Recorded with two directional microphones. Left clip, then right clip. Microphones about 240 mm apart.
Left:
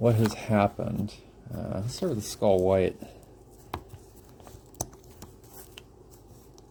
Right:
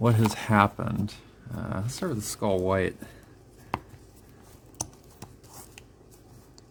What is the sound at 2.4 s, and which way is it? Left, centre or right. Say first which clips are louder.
Speech: left 4 dB; right.